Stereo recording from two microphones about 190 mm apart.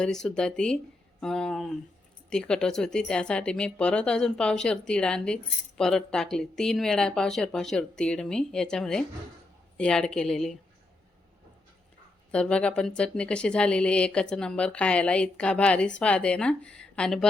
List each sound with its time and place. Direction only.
0.0 s speech: 5° left (ahead or behind)
12.3 s speech: 5° left (ahead or behind)